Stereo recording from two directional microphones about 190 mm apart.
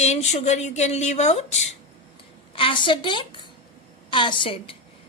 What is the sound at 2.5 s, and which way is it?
A woman's voice, 25° left (ahead or behind).